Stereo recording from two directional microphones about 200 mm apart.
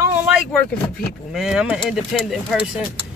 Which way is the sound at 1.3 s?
Centre (ahead or behind).